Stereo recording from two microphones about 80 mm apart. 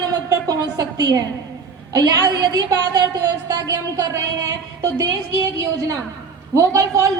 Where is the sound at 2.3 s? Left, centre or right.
Right.